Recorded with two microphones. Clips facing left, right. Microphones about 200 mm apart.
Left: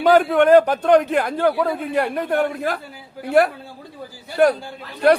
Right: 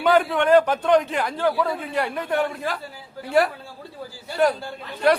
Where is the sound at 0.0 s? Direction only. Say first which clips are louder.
Left 5 dB; 50° left (ahead or behind).